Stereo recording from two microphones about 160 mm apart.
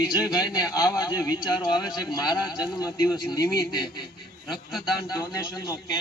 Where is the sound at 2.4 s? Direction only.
5° right (ahead or behind).